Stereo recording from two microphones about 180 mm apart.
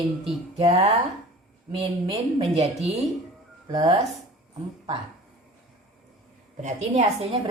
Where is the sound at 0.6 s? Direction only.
35° right (ahead or behind).